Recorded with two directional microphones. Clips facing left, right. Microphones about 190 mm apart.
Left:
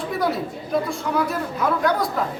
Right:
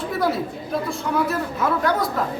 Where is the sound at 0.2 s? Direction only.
Centre (ahead or behind).